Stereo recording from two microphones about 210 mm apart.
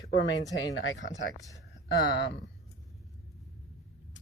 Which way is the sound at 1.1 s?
15° left (ahead or behind).